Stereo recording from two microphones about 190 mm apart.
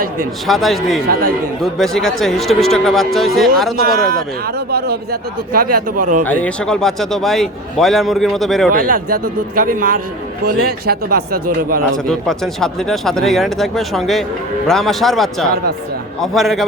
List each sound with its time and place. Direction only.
0.4 s a man's voice: centre (ahead or behind)
1.0 s speech: 50° right (ahead or behind)
1.8 s a man's voice: centre (ahead or behind)
3.8 s speech: 50° right (ahead or behind)
5.5 s speech: 50° right (ahead or behind)
6.2 s a man's voice: 5° left (ahead or behind)
8.7 s speech: 45° right (ahead or behind)
12.0 s a man's voice: 5° left (ahead or behind)